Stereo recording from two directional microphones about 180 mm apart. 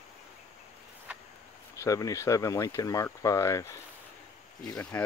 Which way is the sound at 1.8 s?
20° left (ahead or behind).